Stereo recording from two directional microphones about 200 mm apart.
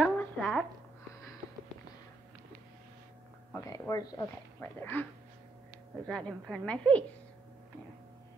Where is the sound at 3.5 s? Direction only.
15° left (ahead or behind).